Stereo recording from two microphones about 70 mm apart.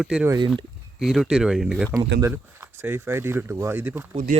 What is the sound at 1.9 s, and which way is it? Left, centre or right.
Speech, right.